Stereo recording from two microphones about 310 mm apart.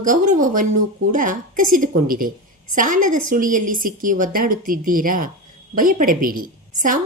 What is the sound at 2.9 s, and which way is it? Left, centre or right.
Speech, right.